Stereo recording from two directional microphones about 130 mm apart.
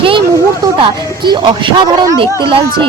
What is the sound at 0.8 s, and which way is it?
Speech, 35° right (ahead or behind).